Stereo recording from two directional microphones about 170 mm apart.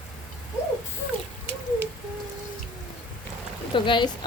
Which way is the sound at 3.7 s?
30° left (ahead or behind).